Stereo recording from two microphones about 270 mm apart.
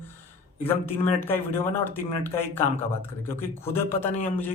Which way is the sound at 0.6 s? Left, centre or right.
Centre.